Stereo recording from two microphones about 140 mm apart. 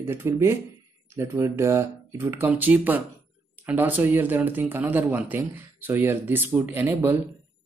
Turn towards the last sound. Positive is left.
turn(degrees=-15)  # may be behind; listen again after turning